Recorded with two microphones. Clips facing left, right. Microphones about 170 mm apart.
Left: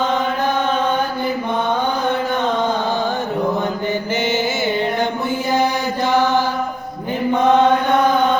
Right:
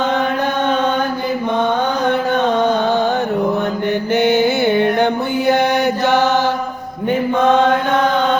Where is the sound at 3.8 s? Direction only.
60° right (ahead or behind).